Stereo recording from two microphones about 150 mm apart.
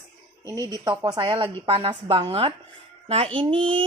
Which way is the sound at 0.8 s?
30° right (ahead or behind).